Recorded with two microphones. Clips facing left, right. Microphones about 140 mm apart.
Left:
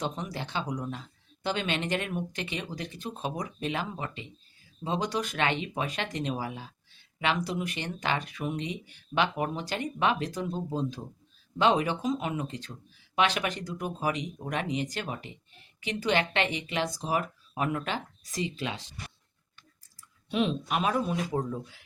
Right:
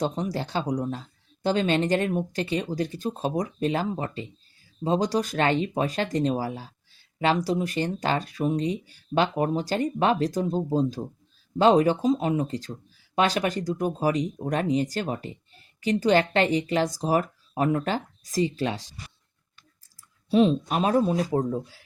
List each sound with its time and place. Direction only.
0.0 s speech: 35° right (ahead or behind)
20.3 s speech: 35° right (ahead or behind)